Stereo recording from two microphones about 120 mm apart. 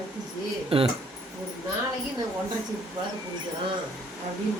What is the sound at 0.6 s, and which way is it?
Speech, 50° right (ahead or behind).